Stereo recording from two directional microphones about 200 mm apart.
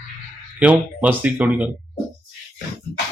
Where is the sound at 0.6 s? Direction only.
5° right (ahead or behind).